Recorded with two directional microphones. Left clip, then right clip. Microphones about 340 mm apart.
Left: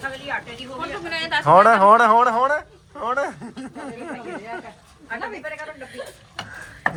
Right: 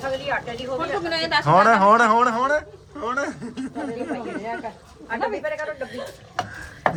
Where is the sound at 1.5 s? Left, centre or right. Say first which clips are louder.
Left 3 dB; centre.